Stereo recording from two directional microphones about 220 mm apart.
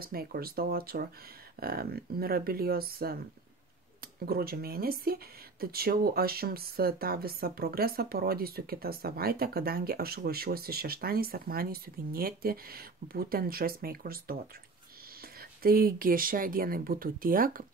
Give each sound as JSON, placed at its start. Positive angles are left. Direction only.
{"t": 0.0, "sound": "speech", "side_deg": -45}
{"t": 4.3, "sound": "speech", "side_deg": -45}
{"t": 15.6, "sound": "speech", "side_deg": -40}